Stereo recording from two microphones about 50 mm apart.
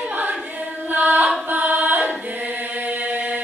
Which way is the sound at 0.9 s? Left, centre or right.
Right.